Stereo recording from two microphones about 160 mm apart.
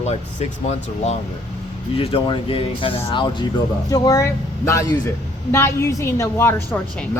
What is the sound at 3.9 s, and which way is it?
Speech, 20° left (ahead or behind).